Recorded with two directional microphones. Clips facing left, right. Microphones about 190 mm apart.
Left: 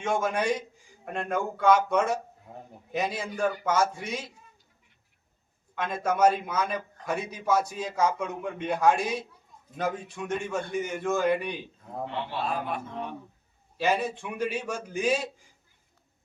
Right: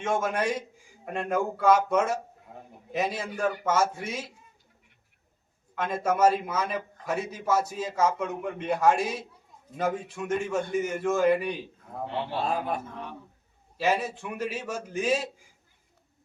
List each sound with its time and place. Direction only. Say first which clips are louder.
0.0 s a man's voice: even; centre (ahead or behind)
5.7 s a man's voice: right 1 dB; 5° right (ahead or behind)
12.3 s a man's voice: right 3 dB; 40° right (ahead or behind)
13.7 s a man's voice: even; 5° right (ahead or behind)